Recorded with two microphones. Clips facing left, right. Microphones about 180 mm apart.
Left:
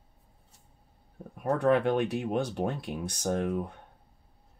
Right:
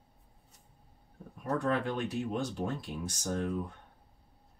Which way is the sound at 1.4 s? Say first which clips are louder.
Left 7 dB; 65° left (ahead or behind).